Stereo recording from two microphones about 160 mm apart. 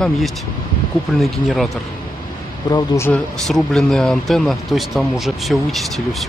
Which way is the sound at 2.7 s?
20° left (ahead or behind).